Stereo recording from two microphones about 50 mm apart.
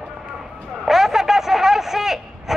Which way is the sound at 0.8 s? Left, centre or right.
Centre.